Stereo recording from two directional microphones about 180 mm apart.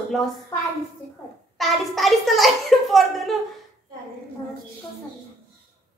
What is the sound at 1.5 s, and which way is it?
A child's voice, centre (ahead or behind).